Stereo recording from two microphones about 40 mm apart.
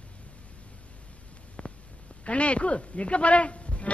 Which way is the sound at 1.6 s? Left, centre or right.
Left.